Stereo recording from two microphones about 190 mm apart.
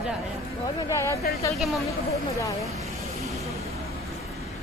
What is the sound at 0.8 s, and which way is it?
Speech, 15° left (ahead or behind).